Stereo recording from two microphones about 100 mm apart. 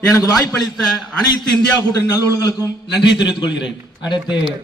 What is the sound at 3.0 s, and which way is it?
Speech, 50° left (ahead or behind).